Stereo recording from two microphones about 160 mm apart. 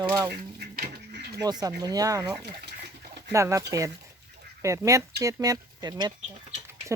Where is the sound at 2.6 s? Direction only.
90° right.